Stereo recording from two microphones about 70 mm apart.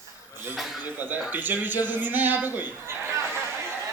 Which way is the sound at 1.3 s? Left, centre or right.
Right.